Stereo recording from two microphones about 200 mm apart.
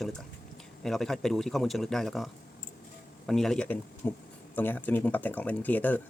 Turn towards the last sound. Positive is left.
turn(degrees=10)  # may be behind; listen again after turning